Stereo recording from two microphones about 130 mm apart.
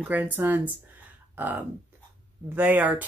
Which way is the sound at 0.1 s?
15° right (ahead or behind).